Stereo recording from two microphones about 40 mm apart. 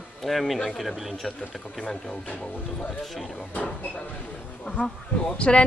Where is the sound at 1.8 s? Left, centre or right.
Centre.